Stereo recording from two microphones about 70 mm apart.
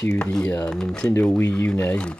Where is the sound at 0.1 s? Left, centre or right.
Centre.